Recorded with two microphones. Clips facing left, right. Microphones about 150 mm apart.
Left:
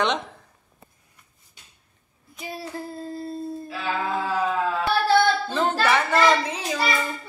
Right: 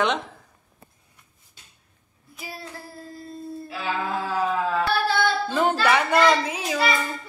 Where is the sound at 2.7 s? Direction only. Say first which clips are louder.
Left 7 dB; 25° left (ahead or behind).